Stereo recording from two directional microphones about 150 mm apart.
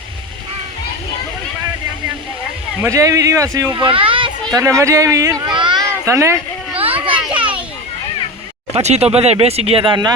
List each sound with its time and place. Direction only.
2.8 s speech: 20° right (ahead or behind)
3.8 s children playing: 35° right (ahead or behind)
4.5 s speech: 20° right (ahead or behind)
5.5 s a sound: 30° right (ahead or behind)
6.1 s speech: 20° right (ahead or behind)
7.0 s children playing: 35° right (ahead or behind)
7.3 s children playing: 10° right (ahead or behind)
8.7 s speech: 45° right (ahead or behind)